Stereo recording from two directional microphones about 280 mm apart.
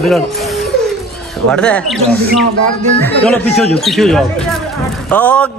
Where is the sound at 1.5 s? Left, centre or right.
Centre.